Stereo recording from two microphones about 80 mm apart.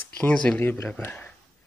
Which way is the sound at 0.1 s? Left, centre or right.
Centre.